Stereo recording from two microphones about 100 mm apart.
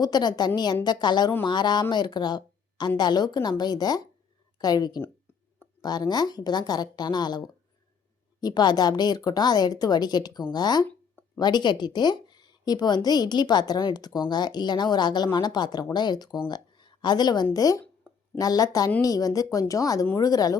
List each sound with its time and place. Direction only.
0.0 s a woman's voice: 45° left (ahead or behind)